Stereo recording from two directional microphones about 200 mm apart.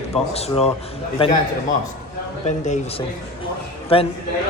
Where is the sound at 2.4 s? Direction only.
35° left (ahead or behind).